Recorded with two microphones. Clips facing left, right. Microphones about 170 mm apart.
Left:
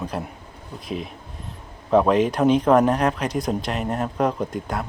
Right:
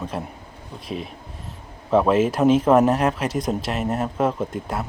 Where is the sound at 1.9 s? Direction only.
Centre (ahead or behind).